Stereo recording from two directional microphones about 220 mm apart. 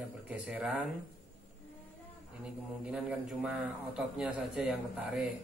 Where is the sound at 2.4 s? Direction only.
5° right (ahead or behind).